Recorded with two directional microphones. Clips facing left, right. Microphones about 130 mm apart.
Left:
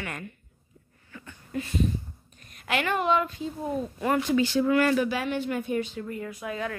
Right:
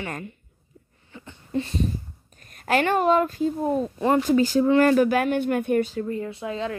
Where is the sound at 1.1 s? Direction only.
25° right (ahead or behind).